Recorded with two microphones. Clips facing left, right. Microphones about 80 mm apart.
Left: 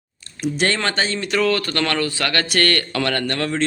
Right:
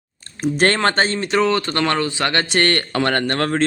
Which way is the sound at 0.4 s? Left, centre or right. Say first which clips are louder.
Right 4 dB; right.